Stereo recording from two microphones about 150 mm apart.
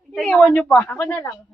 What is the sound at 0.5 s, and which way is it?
Speech, 10° left (ahead or behind).